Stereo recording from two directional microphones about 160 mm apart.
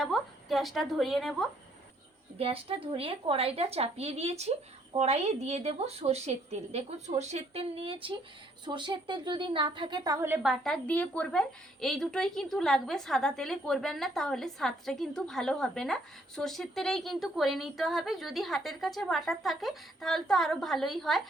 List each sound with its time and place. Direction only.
0.0 s a woman's voice: centre (ahead or behind)
2.4 s a woman's voice: 35° right (ahead or behind); by 21.2 s centre (ahead or behind)